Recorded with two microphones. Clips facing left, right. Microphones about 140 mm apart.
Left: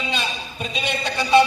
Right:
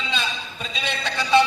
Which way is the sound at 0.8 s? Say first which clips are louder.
Left 2 dB; 15° left (ahead or behind).